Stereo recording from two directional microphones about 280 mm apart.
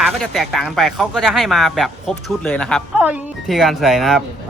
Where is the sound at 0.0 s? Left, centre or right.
Centre.